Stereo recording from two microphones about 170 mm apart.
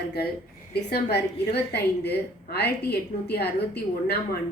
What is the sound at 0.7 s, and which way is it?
A woman's voice, 70° left (ahead or behind).